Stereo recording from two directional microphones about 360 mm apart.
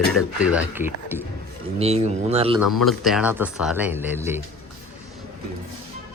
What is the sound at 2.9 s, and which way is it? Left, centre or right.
Speech, centre.